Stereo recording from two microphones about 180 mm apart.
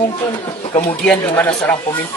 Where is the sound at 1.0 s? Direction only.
5° left (ahead or behind).